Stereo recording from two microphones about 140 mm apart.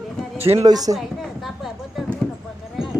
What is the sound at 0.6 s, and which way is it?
Speech, 25° right (ahead or behind).